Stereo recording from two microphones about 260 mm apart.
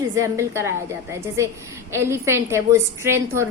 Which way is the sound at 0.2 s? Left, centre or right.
Centre.